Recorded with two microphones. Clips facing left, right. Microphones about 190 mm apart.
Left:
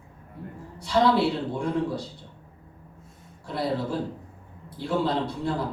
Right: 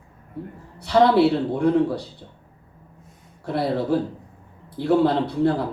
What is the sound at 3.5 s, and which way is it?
Speech, 65° right (ahead or behind).